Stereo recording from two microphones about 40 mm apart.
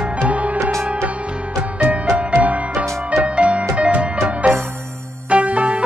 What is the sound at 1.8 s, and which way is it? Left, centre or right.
Music, right.